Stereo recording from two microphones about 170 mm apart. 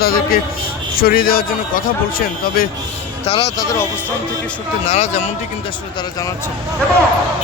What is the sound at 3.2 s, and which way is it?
Speech, 35° left (ahead or behind).